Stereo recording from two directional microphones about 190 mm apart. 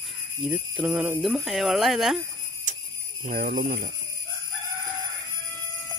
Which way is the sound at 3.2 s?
45° right (ahead or behind).